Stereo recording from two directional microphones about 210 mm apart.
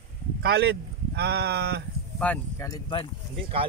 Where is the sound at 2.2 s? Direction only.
5° left (ahead or behind).